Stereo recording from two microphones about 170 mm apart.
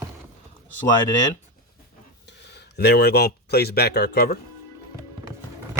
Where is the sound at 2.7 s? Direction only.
75° left (ahead or behind).